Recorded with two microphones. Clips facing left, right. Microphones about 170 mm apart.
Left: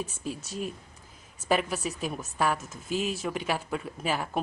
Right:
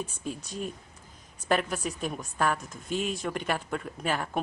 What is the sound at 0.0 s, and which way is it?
Speech, 5° left (ahead or behind).